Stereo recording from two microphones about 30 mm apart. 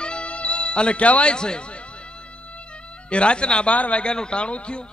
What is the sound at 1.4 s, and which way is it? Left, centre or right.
Speech, left.